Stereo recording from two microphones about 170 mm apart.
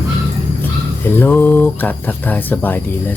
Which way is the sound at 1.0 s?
10° left (ahead or behind).